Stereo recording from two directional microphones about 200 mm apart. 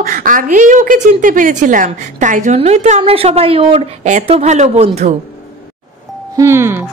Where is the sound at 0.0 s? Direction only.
45° right (ahead or behind).